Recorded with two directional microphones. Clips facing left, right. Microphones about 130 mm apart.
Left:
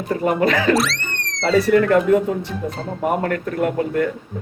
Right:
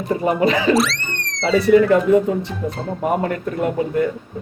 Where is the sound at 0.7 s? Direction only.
Centre (ahead or behind).